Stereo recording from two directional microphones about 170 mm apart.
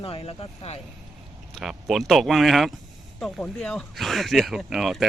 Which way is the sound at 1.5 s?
Centre (ahead or behind).